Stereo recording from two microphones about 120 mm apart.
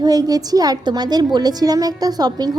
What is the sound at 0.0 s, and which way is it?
A woman's voice, 30° right (ahead or behind).